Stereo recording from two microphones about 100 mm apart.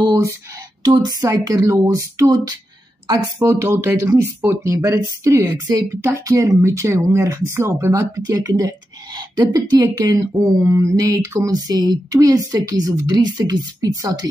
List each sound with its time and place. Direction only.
0.0 s a sound: 35° right (ahead or behind)
0.8 s speech: 45° right (ahead or behind)
3.3 s speech: 25° right (ahead or behind)